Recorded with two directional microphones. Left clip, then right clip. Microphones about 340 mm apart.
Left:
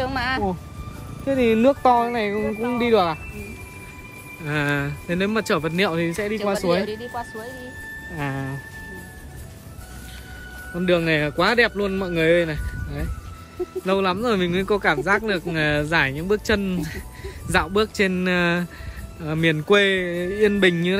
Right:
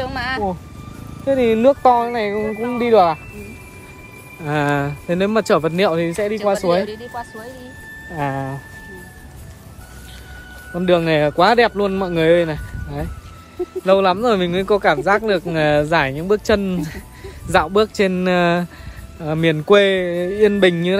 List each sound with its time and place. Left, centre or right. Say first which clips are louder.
0.0 s music: right 1 dB; centre
1.2 s speech: right 4 dB; centre
10.7 s speech: right 4 dB; centre